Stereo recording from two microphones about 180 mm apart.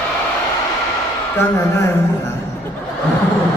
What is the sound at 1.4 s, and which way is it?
Speech, 15° left (ahead or behind).